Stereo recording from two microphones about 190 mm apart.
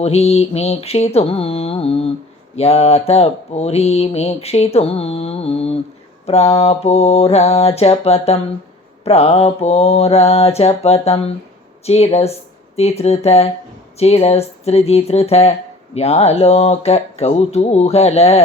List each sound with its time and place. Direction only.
0.0 s mantra: 35° left (ahead or behind)